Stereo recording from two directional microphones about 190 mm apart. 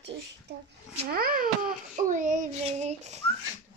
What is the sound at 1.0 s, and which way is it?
A child's voice, 50° right (ahead or behind).